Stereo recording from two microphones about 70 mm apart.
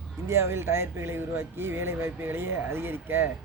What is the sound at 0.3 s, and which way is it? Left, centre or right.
Speech, right.